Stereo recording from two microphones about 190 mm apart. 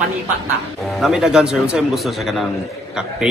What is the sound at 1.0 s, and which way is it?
A woman's voice, 5° right (ahead or behind).